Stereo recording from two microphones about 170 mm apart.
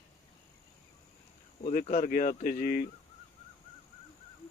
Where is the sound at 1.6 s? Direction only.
50° left (ahead or behind).